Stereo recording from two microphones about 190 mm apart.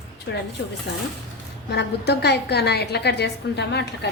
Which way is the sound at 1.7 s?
60° left (ahead or behind).